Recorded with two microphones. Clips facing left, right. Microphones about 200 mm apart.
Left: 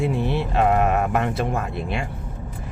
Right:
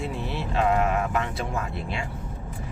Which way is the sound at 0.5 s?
55° left (ahead or behind).